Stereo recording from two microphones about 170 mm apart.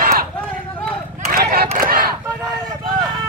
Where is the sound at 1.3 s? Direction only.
60° right (ahead or behind).